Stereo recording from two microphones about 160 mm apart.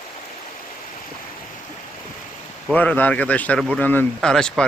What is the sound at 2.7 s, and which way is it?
Speech, 10° left (ahead or behind).